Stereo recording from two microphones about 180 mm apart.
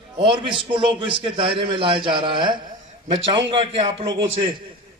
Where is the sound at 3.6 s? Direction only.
30° right (ahead or behind).